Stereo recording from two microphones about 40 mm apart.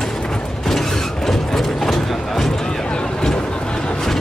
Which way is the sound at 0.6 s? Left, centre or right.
Centre.